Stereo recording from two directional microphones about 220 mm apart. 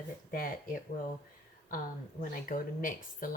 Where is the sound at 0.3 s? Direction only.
40° left (ahead or behind).